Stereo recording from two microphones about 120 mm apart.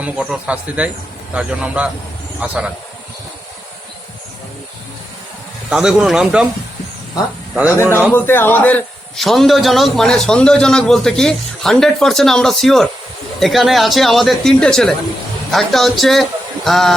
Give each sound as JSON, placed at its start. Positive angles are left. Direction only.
{"t": 0.0, "sound": "speech", "side_deg": -10}
{"t": 5.7, "sound": "a man's voice", "side_deg": -5}
{"t": 7.5, "sound": "speech", "side_deg": -15}
{"t": 8.1, "sound": "speech", "side_deg": 20}
{"t": 9.1, "sound": "a man's voice", "side_deg": 0}